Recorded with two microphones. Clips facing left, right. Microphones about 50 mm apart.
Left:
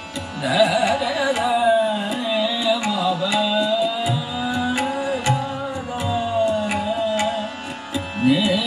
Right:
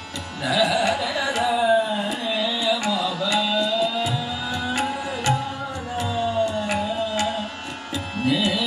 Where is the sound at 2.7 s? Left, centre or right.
Centre.